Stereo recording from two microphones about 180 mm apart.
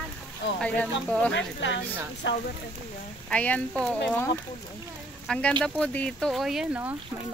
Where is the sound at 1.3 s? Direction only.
90° left.